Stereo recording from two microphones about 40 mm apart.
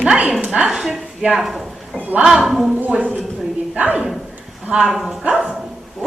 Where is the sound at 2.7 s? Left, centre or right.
Right.